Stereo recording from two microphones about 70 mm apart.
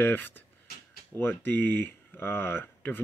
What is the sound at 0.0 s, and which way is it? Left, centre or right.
Speech, left.